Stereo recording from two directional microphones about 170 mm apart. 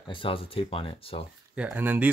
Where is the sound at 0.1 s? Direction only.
30° left (ahead or behind).